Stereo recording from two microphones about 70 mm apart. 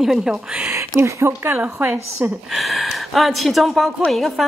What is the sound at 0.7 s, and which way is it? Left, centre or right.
Speech, right.